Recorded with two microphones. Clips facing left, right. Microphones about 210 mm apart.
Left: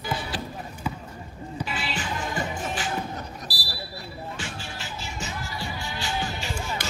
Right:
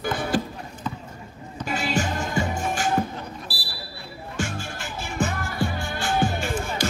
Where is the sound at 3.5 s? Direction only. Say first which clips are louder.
Right 1 dB; 40° left (ahead or behind).